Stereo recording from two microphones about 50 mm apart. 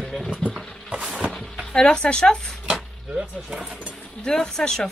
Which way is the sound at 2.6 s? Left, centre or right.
Right.